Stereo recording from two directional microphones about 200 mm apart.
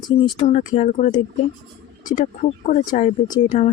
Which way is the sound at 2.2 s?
35° left (ahead or behind).